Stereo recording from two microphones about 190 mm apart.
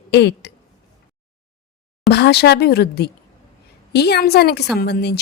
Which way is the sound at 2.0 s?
60° left (ahead or behind).